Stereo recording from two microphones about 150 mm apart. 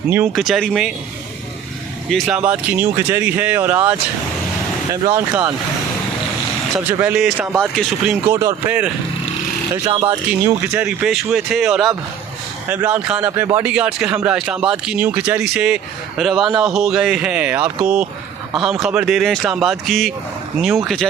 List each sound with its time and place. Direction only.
0.3 s speech: centre (ahead or behind)
2.2 s speech: 10° right (ahead or behind)
6.7 s speech: 10° right (ahead or behind)
8.3 s speech: 20° right (ahead or behind)
9.8 s speech: 30° right (ahead or behind)
10.4 s speech: 10° right (ahead or behind)